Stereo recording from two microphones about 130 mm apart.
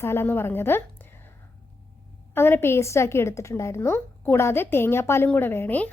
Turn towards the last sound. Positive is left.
turn(degrees=15)  # may be behind; listen again after turning